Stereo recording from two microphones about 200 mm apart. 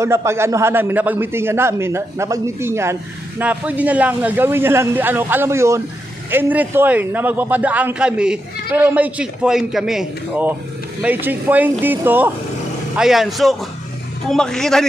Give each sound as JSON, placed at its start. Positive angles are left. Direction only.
{"t": 0.0, "sound": "a man's voice", "side_deg": -15}